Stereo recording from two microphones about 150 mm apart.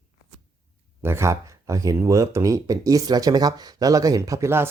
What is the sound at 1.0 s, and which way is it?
Speech, 15° right (ahead or behind).